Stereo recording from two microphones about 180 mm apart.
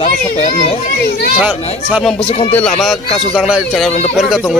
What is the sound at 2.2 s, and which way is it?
Speech, 30° left (ahead or behind).